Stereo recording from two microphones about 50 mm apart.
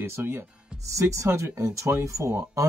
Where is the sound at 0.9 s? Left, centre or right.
Right.